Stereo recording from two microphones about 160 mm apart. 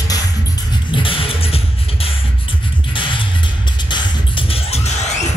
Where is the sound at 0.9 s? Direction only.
35° left (ahead or behind).